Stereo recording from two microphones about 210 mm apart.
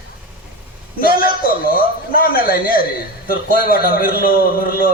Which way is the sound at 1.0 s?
45° left (ahead or behind).